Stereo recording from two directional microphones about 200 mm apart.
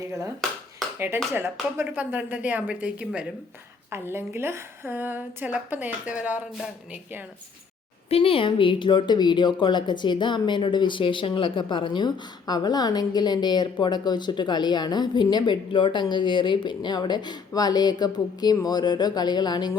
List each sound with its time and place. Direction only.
0.9 s a woman's voice: 10° right (ahead or behind)
8.1 s speech: 25° left (ahead or behind)